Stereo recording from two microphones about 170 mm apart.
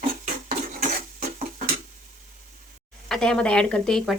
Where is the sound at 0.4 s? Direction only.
50° right (ahead or behind).